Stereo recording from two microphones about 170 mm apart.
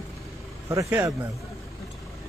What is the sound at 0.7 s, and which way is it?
Speech, 15° right (ahead or behind).